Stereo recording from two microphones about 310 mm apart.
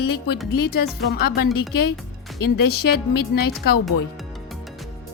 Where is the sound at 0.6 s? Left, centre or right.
Left.